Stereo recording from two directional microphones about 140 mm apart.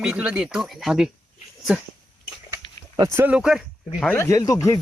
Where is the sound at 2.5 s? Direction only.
25° right (ahead or behind).